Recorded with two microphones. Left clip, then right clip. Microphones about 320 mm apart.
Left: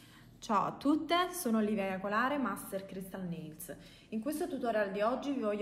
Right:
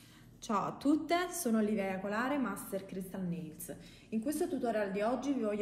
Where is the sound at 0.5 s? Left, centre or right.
Left.